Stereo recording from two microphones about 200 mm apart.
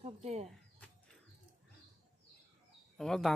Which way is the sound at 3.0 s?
Centre (ahead or behind).